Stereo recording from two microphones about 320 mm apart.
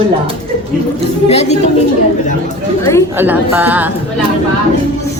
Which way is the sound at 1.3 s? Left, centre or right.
Centre.